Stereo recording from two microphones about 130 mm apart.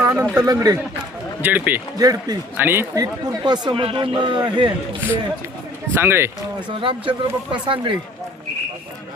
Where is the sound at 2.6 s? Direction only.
15° right (ahead or behind); by 4.7 s 35° right (ahead or behind).